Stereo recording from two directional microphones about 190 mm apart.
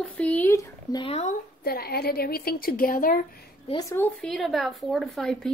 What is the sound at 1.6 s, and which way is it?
A woman's voice, 55° left (ahead or behind).